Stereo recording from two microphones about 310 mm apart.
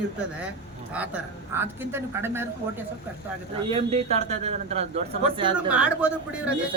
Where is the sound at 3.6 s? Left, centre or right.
Centre.